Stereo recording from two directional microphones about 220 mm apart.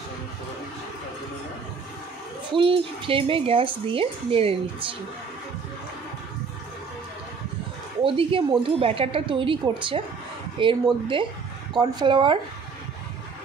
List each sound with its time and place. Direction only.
2.5 s speech: 25° right (ahead or behind)
8.0 s speech: 25° right (ahead or behind)